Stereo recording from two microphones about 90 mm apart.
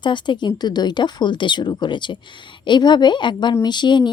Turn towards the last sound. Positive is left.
turn(degrees=55)  # may be behind; listen again after turning